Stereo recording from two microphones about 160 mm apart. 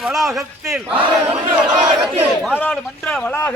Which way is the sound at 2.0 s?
5° right (ahead or behind).